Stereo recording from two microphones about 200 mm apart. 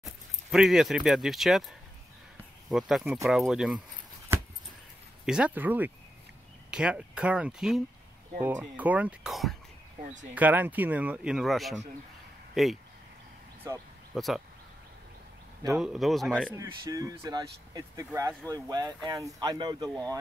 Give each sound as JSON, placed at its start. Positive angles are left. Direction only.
{"t": 0.0, "sound": "speech", "side_deg": 0}
{"t": 4.3, "sound": "a sound", "side_deg": -10}
{"t": 5.2, "sound": "speech", "side_deg": -5}
{"t": 13.7, "sound": "speech", "side_deg": -15}
{"t": 14.1, "sound": "speech", "side_deg": 0}
{"t": 15.7, "sound": "speech", "side_deg": 0}
{"t": 16.5, "sound": "speech", "side_deg": -15}